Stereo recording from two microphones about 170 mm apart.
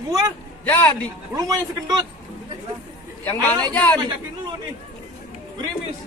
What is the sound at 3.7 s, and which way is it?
Speech, 10° left (ahead or behind).